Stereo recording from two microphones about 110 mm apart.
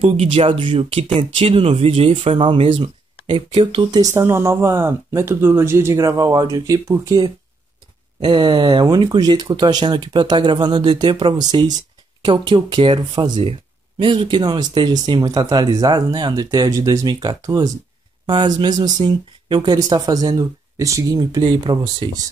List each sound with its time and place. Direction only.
0.1 s speech: 60° right (ahead or behind)
2.3 s speech: 55° right (ahead or behind)
4.0 s speech: 25° right (ahead or behind)
8.2 s speech: 45° right (ahead or behind)
13.4 s speech: 55° right (ahead or behind); by 17.6 s 30° right (ahead or behind)
18.2 s speech: 45° right (ahead or behind)
21.2 s speech: 45° right (ahead or behind)